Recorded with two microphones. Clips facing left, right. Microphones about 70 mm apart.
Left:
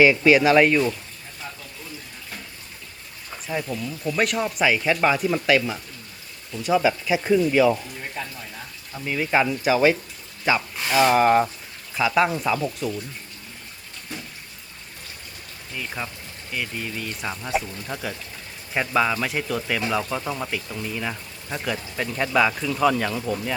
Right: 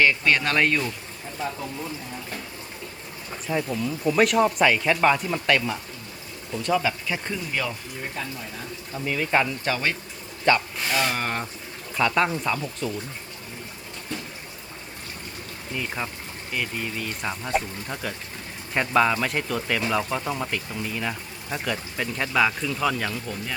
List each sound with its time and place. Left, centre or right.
0.0 s speech: centre
3.4 s speech: centre
9.0 s speech: centre
15.7 s speech: centre
20.9 s speech: centre
23.1 s speech: left